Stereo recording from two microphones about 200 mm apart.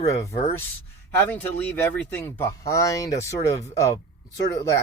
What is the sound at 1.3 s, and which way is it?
Speech, 5° left (ahead or behind).